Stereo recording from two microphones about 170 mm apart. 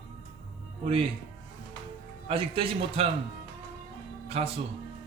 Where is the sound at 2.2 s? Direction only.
35° right (ahead or behind).